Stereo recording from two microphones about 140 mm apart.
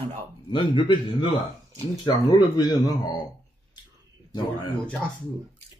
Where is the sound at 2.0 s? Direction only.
30° left (ahead or behind).